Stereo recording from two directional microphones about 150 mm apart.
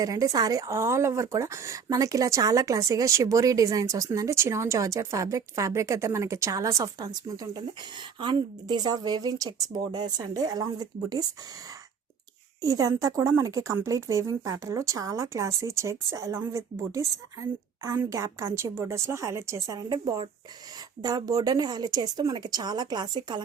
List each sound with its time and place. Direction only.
0.0 s a woman's voice: 25° right (ahead or behind)
12.6 s a woman's voice: 20° right (ahead or behind)